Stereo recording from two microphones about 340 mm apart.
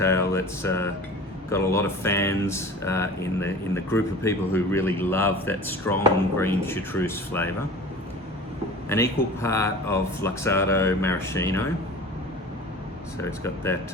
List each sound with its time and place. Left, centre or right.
0.0 s speech: centre
8.9 s speech: centre
13.2 s speech: centre